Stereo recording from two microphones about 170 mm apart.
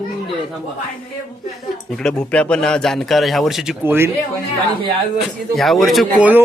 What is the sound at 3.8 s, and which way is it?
Speech, 10° right (ahead or behind).